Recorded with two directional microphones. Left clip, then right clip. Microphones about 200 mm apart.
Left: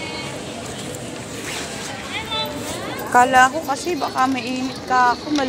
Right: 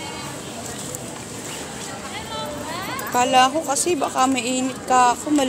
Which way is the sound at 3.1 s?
15° right (ahead or behind).